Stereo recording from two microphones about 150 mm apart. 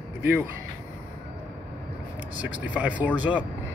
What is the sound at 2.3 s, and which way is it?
Speech, 10° right (ahead or behind).